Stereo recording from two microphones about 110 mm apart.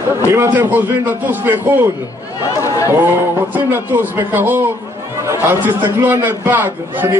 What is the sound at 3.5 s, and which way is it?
A man's voice, 15° right (ahead or behind).